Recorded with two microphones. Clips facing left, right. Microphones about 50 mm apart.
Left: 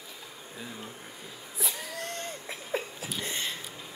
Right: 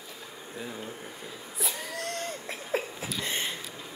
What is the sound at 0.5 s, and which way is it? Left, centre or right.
Speech, centre.